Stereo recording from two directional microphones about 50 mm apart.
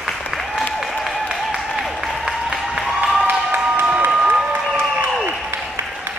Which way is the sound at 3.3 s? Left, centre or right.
Right.